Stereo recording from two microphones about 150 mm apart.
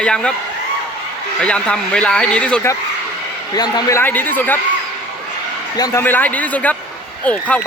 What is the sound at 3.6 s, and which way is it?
A man's voice, 25° left (ahead or behind).